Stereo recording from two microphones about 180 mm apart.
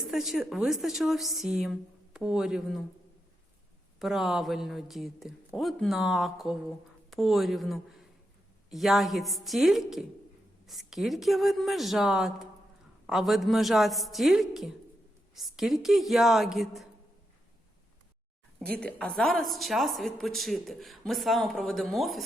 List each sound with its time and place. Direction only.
0.0 s speech: centre (ahead or behind)
4.0 s speech: centre (ahead or behind)
18.7 s speech: 5° left (ahead or behind)